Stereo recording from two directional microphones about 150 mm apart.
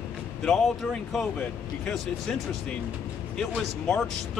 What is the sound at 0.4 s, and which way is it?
Speech, centre (ahead or behind).